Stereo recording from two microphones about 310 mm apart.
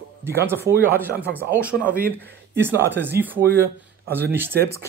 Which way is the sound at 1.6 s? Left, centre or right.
Centre.